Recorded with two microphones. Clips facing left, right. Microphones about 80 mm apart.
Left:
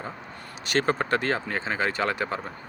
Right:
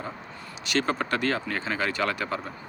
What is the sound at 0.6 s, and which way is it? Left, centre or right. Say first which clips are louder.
Speech: left 2 dB; left.